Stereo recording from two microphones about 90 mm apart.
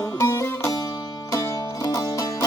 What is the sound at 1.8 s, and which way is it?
Music, 40° left (ahead or behind).